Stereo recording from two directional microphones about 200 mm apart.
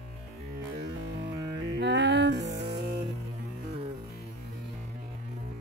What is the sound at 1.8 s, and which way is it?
Music, 60° right (ahead or behind).